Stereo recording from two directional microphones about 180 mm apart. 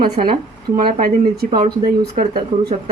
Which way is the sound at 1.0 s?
55° right (ahead or behind).